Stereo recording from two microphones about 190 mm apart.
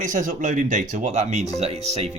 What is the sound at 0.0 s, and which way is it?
Speech, 40° right (ahead or behind).